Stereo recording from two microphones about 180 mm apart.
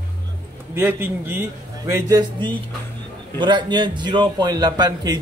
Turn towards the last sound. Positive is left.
turn(degrees=-20)  # may be behind; listen again after turning